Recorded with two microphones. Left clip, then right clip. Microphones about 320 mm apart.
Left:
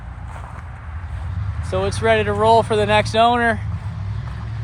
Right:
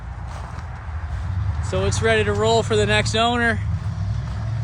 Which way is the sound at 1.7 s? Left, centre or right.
Centre.